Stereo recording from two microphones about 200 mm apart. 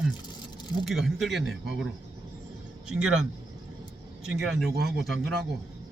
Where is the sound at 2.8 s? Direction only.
5° right (ahead or behind).